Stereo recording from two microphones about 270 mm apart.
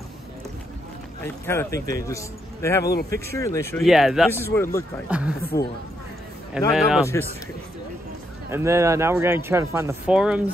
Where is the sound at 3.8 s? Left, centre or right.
Centre.